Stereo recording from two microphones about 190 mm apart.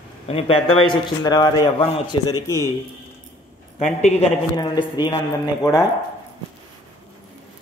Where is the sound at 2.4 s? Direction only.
15° left (ahead or behind).